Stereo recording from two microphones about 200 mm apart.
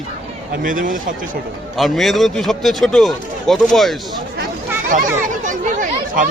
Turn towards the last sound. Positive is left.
turn(degrees=-40)  # may be behind; listen again after turning